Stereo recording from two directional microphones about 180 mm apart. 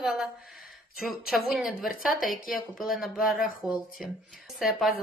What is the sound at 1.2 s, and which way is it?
Speech, centre (ahead or behind).